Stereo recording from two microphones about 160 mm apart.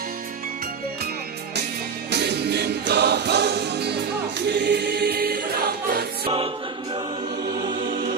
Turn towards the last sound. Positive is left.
turn(degrees=-30)  # may be behind; listen again after turning